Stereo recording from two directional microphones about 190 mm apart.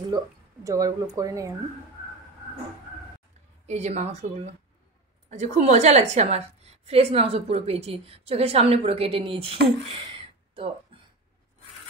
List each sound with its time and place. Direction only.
0.7 s speech: 20° right (ahead or behind)
3.6 s a woman's voice: 35° right (ahead or behind)
10.1 s a sound: 30° right (ahead or behind)